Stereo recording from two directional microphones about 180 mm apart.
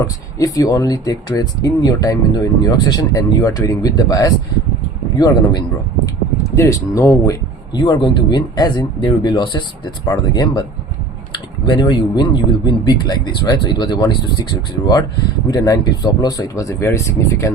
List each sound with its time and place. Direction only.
0.0 s speech: 20° left (ahead or behind)
15.4 s speech: 20° left (ahead or behind)